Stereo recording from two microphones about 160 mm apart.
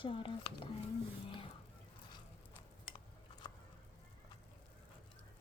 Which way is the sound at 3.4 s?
30° left (ahead or behind).